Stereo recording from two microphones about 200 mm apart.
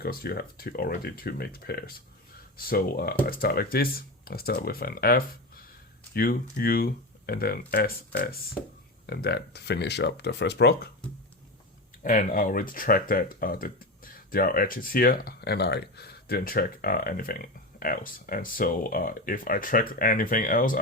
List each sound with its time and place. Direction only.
0.0 s speech: 50° left (ahead or behind)
12.0 s speech: 40° left (ahead or behind)